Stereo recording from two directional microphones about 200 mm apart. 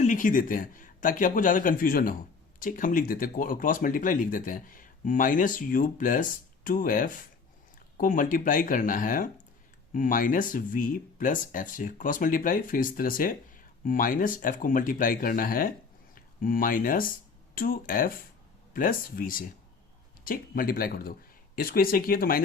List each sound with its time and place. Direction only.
0.0 s speech: 40° left (ahead or behind)